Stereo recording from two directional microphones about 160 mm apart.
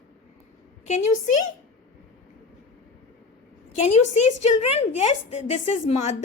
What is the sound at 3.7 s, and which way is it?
A woman's voice, 50° left (ahead or behind).